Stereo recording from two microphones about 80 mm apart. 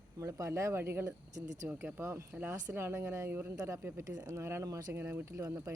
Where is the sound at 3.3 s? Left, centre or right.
Right.